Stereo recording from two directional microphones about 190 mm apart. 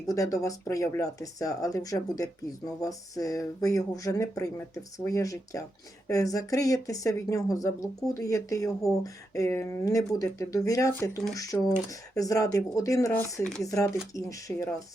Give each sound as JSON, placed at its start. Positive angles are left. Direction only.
{"t": 0.1, "sound": "speech", "side_deg": 15}